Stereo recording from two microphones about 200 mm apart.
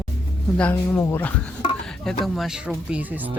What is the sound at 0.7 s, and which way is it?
Speech, 10° left (ahead or behind).